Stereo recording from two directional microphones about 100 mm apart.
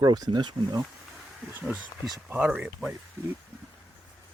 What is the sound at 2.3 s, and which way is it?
Speech, 15° right (ahead or behind).